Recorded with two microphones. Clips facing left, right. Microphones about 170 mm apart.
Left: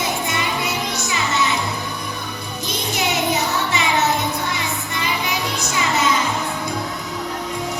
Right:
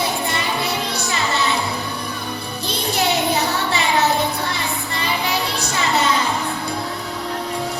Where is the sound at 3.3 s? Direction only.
60° right (ahead or behind).